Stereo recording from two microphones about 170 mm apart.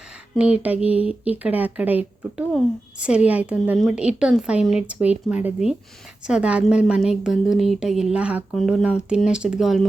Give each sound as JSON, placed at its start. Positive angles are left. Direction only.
{"t": 0.3, "sound": "a woman's voice", "side_deg": -5}